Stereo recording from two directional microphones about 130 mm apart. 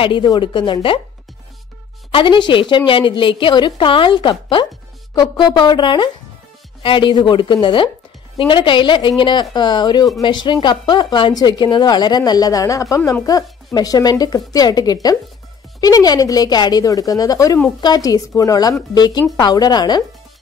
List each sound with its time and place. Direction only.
0.0 s a woman's voice: 35° left (ahead or behind)
2.0 s a woman's voice: 40° left (ahead or behind)